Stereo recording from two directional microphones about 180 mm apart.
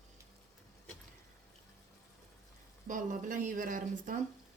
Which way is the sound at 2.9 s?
45° right (ahead or behind).